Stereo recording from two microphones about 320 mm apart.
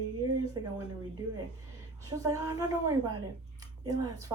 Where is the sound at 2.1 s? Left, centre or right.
Centre.